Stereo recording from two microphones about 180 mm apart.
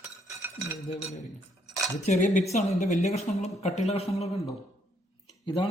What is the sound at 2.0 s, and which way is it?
Speech, 40° left (ahead or behind).